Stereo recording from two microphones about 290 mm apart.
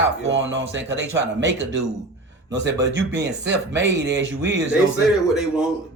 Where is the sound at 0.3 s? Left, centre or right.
Right.